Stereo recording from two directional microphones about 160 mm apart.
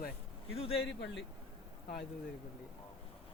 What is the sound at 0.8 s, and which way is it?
Speech, 90° left.